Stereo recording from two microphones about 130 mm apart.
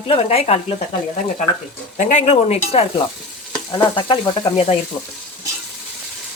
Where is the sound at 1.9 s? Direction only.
70° left (ahead or behind); by 3.0 s 55° left (ahead or behind).